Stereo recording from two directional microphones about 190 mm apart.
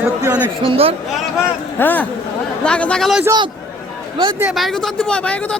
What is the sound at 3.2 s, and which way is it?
Speech, 20° right (ahead or behind).